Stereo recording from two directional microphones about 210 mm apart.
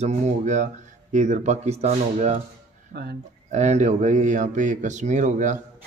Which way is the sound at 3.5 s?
35° right (ahead or behind).